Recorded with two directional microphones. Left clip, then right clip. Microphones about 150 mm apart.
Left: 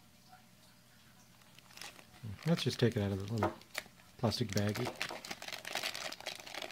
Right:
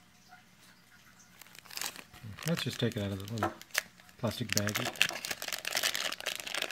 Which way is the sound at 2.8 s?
20° left (ahead or behind).